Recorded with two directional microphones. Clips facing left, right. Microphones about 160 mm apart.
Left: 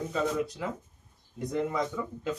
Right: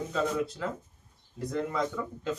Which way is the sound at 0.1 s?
Centre (ahead or behind).